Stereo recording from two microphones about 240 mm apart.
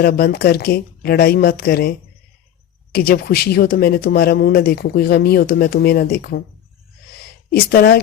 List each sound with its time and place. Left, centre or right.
0.0 s speech: left
2.9 s speech: left
7.5 s speech: left